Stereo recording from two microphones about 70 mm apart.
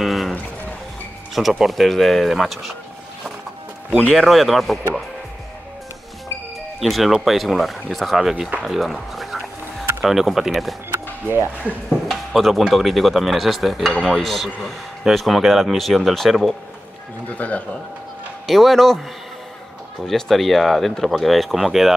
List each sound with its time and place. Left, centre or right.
0.0 s music: centre
1.6 s speech: centre
4.1 s speech: centre
6.8 s speech: centre
8.6 s music: centre
10.0 s speech: centre
10.9 s music: right
11.9 s speech: centre
17.4 s a man's voice: left
18.5 s speech: centre
20.1 s speech: centre